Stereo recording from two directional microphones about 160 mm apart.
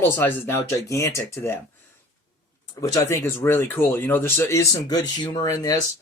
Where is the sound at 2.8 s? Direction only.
15° left (ahead or behind).